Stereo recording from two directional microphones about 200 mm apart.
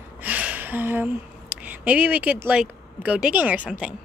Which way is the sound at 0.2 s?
5° right (ahead or behind).